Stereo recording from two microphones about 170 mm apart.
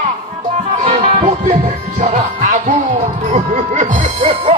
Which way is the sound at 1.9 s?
50° right (ahead or behind).